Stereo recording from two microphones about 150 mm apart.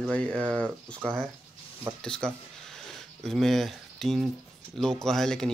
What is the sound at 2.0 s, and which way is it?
Speech, 5° left (ahead or behind).